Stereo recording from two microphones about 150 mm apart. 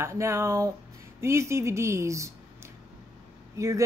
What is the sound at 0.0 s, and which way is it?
Speech, 20° right (ahead or behind).